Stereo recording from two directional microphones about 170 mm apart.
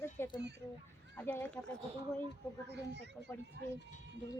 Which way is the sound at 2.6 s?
90° right.